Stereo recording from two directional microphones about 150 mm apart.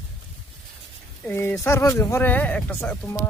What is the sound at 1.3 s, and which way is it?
Speech, 15° left (ahead or behind).